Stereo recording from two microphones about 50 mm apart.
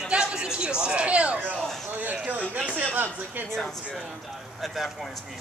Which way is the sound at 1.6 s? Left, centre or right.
Centre.